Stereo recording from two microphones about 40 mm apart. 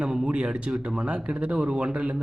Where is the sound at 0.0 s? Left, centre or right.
Centre.